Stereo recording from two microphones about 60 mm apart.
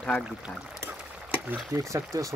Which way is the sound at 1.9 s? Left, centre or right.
Right.